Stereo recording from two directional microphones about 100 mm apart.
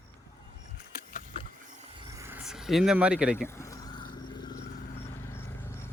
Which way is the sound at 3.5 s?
30° left (ahead or behind).